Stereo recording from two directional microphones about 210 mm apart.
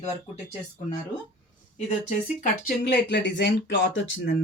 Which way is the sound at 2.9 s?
55° left (ahead or behind).